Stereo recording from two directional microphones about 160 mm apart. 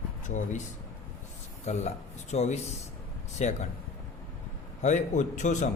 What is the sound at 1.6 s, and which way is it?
Speech, 45° left (ahead or behind).